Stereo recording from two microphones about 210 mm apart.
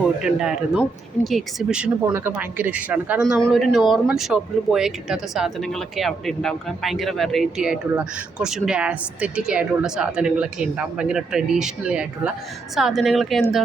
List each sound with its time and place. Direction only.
0.2 s speech: 5° right (ahead or behind)